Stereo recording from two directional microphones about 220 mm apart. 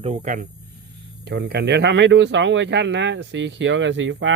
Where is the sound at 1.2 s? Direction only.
50° right (ahead or behind).